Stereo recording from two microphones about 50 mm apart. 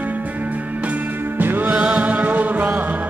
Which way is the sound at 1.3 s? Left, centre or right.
Right.